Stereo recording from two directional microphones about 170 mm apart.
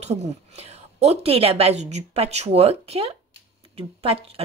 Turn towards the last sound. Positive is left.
turn(degrees=-35)  # may be behind; listen again after turning